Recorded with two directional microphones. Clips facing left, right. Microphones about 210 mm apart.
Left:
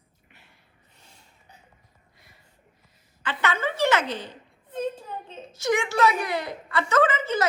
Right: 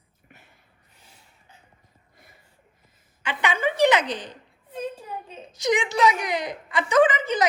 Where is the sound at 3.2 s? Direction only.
15° right (ahead or behind).